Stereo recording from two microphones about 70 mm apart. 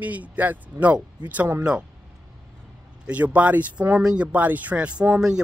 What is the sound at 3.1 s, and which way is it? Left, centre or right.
Speech, right.